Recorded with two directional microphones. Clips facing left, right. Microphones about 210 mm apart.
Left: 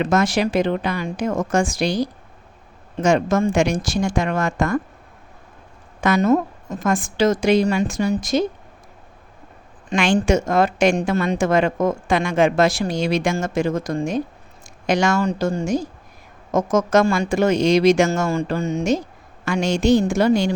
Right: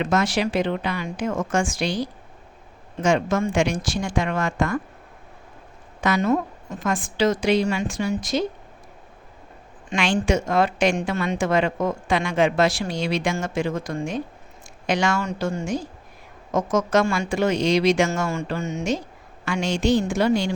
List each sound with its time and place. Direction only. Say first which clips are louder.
0.0 s a woman's voice: left 3 dB; 45° left (ahead or behind)
6.0 s a woman's voice: left 4 dB; 45° left (ahead or behind)
9.9 s a woman's voice: left 4 dB; 45° left (ahead or behind)